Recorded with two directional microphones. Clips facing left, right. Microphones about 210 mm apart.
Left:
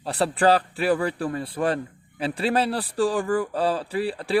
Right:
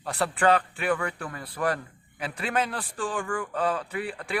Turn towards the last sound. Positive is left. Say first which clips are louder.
# left 6 dB
turn(degrees=30)  # may be behind; listen again after turning